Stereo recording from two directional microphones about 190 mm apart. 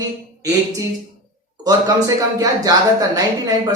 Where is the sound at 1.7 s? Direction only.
20° right (ahead or behind).